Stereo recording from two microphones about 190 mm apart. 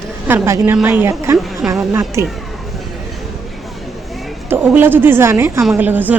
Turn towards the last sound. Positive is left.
turn(degrees=-10)  # may be behind; listen again after turning